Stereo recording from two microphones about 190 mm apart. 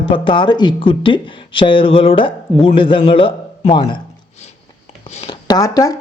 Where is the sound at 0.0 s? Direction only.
25° left (ahead or behind).